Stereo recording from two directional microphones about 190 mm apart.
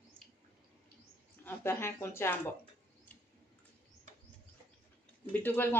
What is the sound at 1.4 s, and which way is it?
Speech, 15° left (ahead or behind).